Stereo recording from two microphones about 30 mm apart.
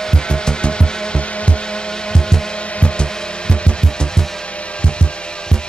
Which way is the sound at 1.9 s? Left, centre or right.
Left.